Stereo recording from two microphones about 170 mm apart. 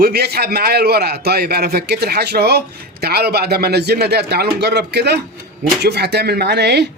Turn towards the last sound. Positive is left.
turn(degrees=-80)